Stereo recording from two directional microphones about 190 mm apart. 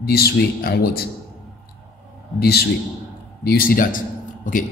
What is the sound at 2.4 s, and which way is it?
A man's voice, 55° left (ahead or behind).